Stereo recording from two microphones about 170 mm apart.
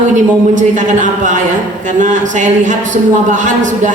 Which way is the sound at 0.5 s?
50° right (ahead or behind).